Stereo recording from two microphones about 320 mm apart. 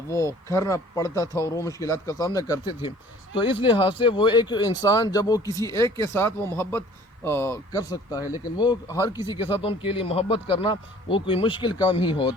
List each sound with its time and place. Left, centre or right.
0.1 s speech: centre